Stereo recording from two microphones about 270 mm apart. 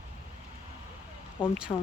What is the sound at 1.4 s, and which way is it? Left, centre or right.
Speech, centre.